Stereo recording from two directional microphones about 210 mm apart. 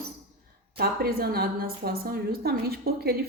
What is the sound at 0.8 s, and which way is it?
A woman's voice, 45° right (ahead or behind).